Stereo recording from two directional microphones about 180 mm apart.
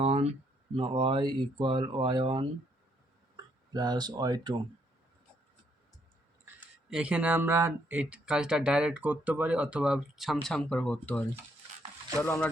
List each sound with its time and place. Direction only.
0.0 s a sound: 35° right (ahead or behind)
0.8 s speech: 30° right (ahead or behind)
3.8 s speech: 20° right (ahead or behind)
6.9 s speech: 5° right (ahead or behind); by 12.5 s 10° left (ahead or behind)